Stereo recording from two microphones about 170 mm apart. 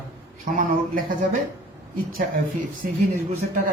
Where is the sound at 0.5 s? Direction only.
55° right (ahead or behind).